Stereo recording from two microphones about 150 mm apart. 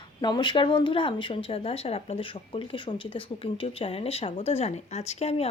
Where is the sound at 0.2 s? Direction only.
30° left (ahead or behind).